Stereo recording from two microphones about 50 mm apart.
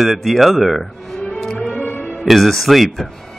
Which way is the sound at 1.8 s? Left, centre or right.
Left.